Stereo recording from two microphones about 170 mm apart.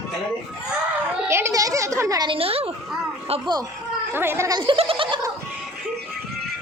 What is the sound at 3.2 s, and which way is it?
Speech, 35° right (ahead or behind).